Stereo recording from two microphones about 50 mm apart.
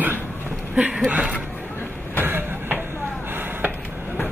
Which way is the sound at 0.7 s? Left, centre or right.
Right.